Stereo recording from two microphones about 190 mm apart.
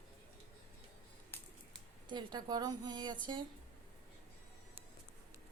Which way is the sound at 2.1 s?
20° right (ahead or behind).